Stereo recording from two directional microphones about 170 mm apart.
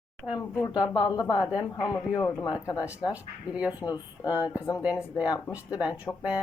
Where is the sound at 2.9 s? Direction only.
10° right (ahead or behind).